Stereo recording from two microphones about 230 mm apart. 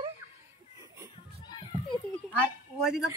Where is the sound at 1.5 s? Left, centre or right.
Centre.